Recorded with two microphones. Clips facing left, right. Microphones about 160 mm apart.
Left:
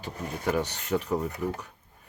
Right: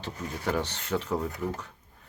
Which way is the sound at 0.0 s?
15° left (ahead or behind).